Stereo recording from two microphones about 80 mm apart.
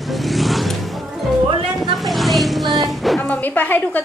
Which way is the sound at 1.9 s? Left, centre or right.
Centre.